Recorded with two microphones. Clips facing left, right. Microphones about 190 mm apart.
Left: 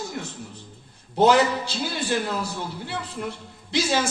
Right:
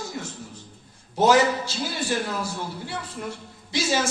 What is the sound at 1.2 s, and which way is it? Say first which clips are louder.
A man's voice: left 1 dB; 60° left (ahead or behind).